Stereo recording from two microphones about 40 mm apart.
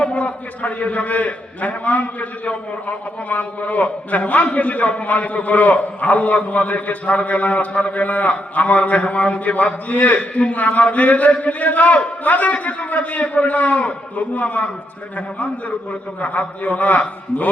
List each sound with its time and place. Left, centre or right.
0.0 s a man's voice: left
10.2 s a man's voice: left
15.9 s a man's voice: left